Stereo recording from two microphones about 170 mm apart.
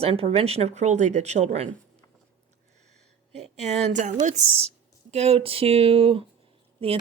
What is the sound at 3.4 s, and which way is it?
Speech, 40° right (ahead or behind).